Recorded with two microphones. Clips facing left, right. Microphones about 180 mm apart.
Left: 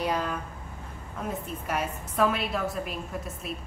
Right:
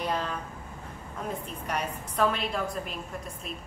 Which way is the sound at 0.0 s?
10° left (ahead or behind).